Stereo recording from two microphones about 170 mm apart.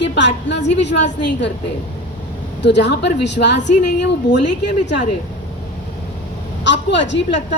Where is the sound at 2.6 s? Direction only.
85° left.